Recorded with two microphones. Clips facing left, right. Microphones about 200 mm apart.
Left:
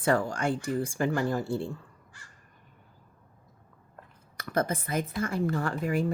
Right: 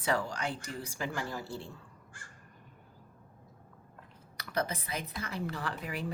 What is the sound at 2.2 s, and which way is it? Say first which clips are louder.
Crow: right 3 dB; 50° right (ahead or behind).